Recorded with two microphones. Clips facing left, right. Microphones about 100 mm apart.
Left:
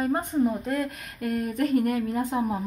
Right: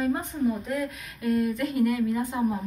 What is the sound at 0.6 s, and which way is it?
A woman's voice, 55° left (ahead or behind).